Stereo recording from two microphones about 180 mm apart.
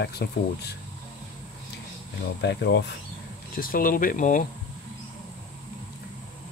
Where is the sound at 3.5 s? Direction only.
50° left (ahead or behind).